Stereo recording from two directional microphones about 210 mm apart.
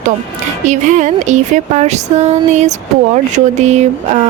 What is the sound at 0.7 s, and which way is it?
Speech, 35° right (ahead or behind).